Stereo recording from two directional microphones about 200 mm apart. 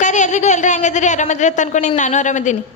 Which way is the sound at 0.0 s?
35° left (ahead or behind).